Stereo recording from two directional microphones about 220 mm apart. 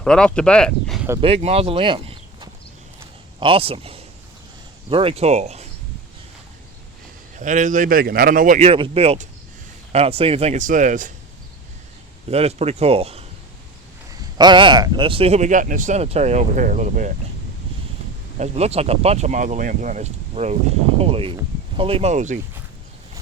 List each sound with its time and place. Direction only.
0.0 s speech: 5° left (ahead or behind)
1.2 s a man's voice: 30° right (ahead or behind)
7.3 s speech: 35° right (ahead or behind)
12.3 s speech: 30° right (ahead or behind)
18.3 s speech: 30° right (ahead or behind)